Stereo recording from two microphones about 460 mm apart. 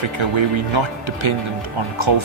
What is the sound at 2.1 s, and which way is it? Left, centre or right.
Speech, right.